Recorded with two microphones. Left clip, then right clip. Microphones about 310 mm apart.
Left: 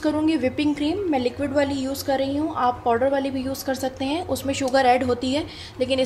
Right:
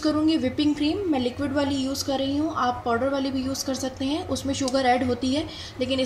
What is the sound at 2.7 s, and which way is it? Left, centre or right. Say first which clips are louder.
Speech: left 4 dB; left.